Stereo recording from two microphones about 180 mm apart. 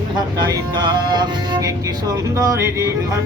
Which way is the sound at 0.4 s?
25° right (ahead or behind).